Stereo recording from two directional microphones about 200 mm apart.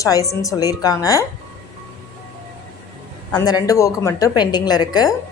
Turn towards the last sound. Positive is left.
turn(degrees=20)  # may be behind; listen again after turning